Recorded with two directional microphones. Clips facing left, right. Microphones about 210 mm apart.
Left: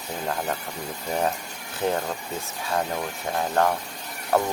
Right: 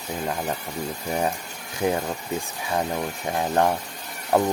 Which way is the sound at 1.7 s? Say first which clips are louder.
Right 2 dB; 10° right (ahead or behind).